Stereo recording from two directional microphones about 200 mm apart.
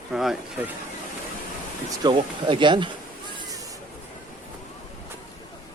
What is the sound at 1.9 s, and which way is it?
Speech, 20° right (ahead or behind).